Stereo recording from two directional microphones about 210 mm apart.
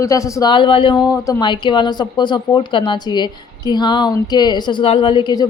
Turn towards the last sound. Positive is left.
turn(degrees=20)  # may be behind; listen again after turning